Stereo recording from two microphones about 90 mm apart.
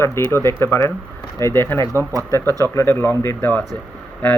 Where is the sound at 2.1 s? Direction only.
40° right (ahead or behind).